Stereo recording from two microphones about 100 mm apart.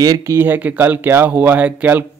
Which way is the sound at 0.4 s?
20° right (ahead or behind).